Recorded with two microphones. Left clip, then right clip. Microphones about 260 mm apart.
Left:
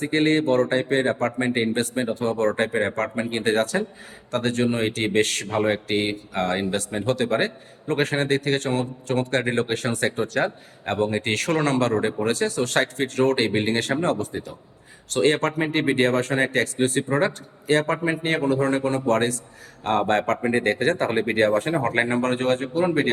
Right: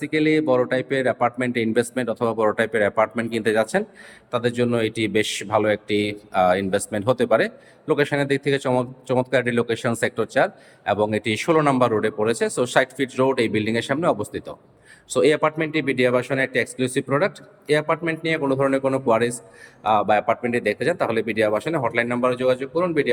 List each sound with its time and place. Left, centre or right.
0.0 s speech: centre